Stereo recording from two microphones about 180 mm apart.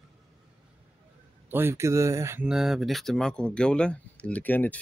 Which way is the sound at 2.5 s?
Centre (ahead or behind).